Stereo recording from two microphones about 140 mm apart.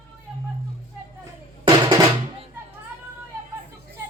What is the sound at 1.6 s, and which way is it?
Drum, 30° right (ahead or behind).